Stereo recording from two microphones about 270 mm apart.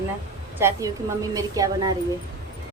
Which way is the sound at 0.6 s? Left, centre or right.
Centre.